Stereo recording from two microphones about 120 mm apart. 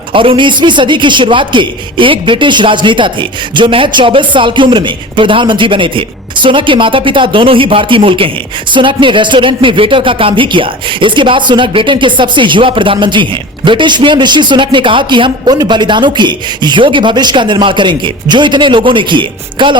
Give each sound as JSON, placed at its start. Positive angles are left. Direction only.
{"t": 0.1, "sound": "a man's voice", "side_deg": -45}